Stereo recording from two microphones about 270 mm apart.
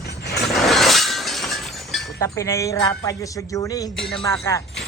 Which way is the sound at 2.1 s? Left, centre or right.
Centre.